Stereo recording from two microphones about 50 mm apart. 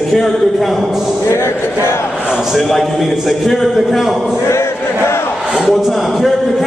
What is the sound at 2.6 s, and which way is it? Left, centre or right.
A man's voice, centre.